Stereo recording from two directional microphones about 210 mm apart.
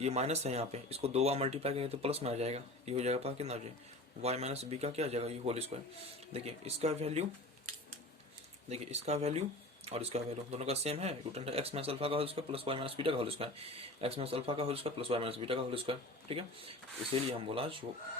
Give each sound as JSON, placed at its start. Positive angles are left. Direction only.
{"t": 0.0, "sound": "speech", "side_deg": -30}
{"t": 8.7, "sound": "speech", "side_deg": -30}